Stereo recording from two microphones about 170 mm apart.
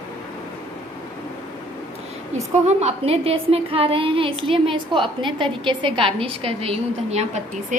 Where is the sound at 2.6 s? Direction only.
40° right (ahead or behind).